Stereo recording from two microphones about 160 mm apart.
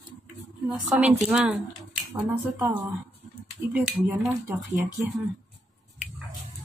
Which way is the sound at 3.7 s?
5° right (ahead or behind).